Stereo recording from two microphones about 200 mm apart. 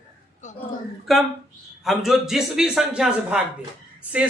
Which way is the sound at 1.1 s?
Centre (ahead or behind).